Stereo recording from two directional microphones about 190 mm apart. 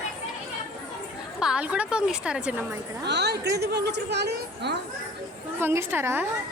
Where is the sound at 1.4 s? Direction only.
5° right (ahead or behind).